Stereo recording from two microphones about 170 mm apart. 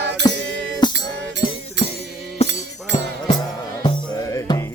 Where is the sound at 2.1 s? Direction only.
Centre (ahead or behind).